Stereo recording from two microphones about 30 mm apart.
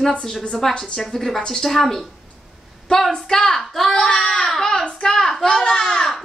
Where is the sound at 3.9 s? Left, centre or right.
Left.